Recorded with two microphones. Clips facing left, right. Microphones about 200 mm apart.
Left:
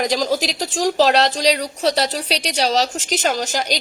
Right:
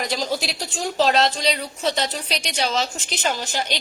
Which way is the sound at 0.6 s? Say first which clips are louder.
Left 8 dB; 90° left.